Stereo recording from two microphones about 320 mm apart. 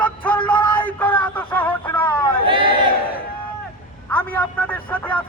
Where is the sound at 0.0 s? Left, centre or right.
Centre.